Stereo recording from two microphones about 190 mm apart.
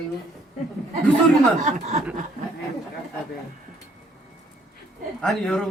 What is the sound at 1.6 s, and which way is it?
Speech, 40° right (ahead or behind).